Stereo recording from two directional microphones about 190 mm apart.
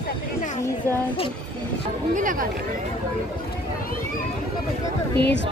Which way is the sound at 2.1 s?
45° right (ahead or behind).